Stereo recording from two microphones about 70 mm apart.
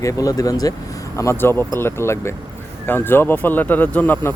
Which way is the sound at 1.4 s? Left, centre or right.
Left.